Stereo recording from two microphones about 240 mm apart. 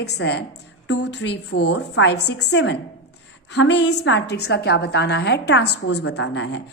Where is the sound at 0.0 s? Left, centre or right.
Left.